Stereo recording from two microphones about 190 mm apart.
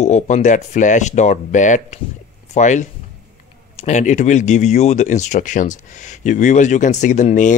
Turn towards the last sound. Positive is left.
turn(degrees=40)  # may be behind; listen again after turning